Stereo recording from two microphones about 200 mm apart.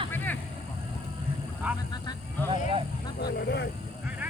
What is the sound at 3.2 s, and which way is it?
Speech, 55° left (ahead or behind).